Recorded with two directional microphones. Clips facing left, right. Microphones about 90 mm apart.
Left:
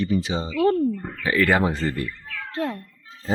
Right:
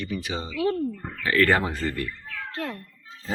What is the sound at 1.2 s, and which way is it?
Speech, 10° left (ahead or behind).